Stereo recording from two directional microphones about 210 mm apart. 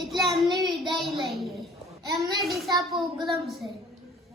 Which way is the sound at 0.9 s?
Centre (ahead or behind).